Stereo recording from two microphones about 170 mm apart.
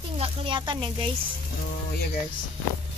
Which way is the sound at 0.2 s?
30° right (ahead or behind).